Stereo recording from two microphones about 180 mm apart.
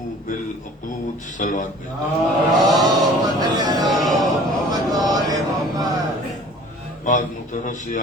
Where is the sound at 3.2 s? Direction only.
20° right (ahead or behind).